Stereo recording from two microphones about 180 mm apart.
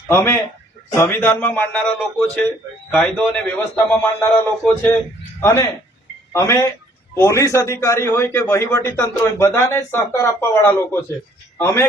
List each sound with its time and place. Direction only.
0.1 s a man's voice: 15° left (ahead or behind)